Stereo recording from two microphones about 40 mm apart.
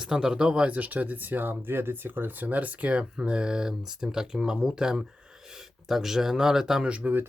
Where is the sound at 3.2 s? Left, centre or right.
Right.